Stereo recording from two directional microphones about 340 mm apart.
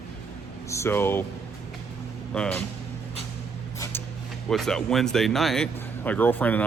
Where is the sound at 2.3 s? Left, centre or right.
Centre.